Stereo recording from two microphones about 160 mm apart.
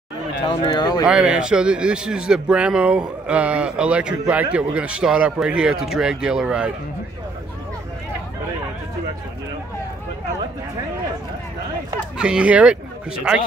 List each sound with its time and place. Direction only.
0.5 s speech: 25° left (ahead or behind)
1.0 s a man's voice: 5° right (ahead or behind)
12.2 s a man's voice: 5° right (ahead or behind)